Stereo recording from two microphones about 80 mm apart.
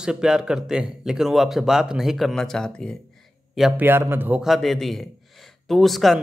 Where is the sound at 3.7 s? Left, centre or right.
Right.